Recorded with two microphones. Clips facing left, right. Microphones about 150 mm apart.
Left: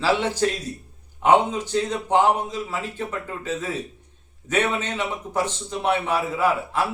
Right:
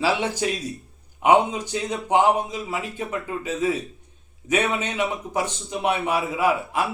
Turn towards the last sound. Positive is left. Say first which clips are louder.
# even
turn(degrees=-15)  # may be behind; listen again after turning